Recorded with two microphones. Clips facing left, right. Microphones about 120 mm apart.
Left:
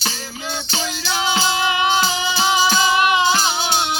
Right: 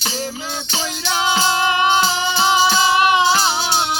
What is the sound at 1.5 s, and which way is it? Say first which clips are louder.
Music: right 3 dB; 35° right (ahead or behind).